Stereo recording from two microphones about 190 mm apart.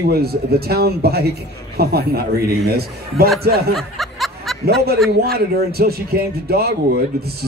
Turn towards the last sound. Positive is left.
turn(degrees=-55)  # may be behind; listen again after turning